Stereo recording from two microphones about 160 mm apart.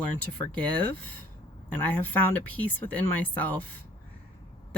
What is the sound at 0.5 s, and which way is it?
Speech, 10° left (ahead or behind).